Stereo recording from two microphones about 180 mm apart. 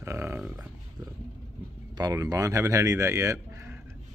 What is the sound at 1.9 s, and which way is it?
Speech, 20° right (ahead or behind).